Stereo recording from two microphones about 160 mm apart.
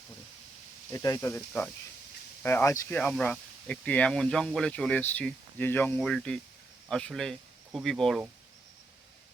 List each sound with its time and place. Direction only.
0.9 s speech: 20° left (ahead or behind)
1.4 s speech: 5° left (ahead or behind)